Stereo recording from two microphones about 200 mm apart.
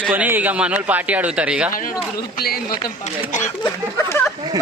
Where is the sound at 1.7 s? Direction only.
45° left (ahead or behind).